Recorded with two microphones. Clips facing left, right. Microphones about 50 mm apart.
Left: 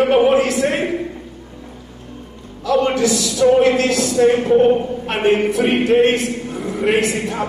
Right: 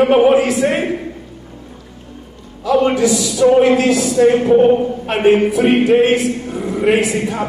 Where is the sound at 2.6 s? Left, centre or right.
Centre.